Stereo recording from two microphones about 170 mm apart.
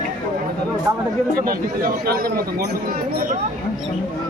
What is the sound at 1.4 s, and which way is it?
A man's voice, 60° right (ahead or behind).